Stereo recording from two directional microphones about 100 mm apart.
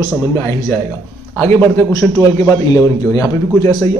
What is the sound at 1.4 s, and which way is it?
A man's voice, 20° left (ahead or behind).